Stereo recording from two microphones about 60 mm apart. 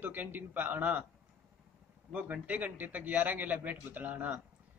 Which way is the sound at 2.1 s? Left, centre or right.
Right.